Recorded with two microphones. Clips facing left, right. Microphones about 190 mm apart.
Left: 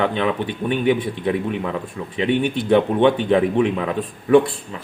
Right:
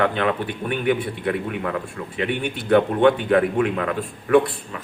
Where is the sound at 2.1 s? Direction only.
20° left (ahead or behind).